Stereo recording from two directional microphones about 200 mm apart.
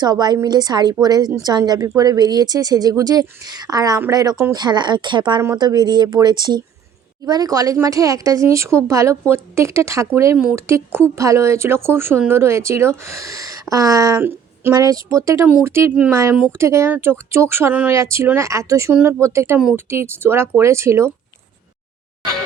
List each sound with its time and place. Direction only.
0.0 s speech: 20° right (ahead or behind)